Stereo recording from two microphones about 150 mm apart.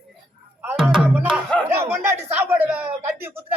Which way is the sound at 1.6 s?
15° right (ahead or behind).